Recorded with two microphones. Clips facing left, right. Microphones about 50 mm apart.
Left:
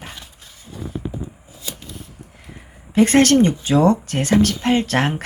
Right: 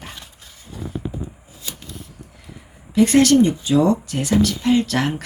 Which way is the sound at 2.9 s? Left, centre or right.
Left.